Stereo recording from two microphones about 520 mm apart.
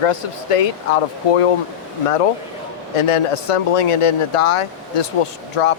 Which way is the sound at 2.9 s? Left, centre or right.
Left.